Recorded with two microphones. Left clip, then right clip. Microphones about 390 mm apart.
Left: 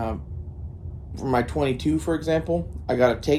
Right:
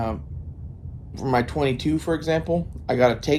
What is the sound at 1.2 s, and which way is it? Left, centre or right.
Speech, centre.